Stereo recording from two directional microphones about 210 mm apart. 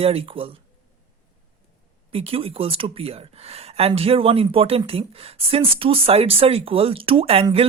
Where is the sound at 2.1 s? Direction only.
25° right (ahead or behind).